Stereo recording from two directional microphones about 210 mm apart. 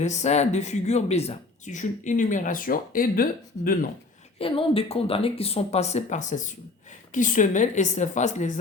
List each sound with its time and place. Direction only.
0.0 s speech: 35° left (ahead or behind)
4.4 s speech: 25° left (ahead or behind)